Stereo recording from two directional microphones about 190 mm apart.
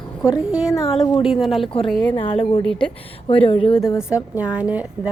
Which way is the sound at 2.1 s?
30° left (ahead or behind).